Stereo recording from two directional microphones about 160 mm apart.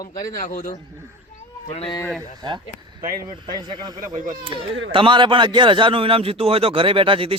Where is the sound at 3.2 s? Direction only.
25° right (ahead or behind).